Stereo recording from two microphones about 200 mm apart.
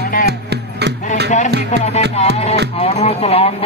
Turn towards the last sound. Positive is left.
turn(degrees=30)  # may be behind; listen again after turning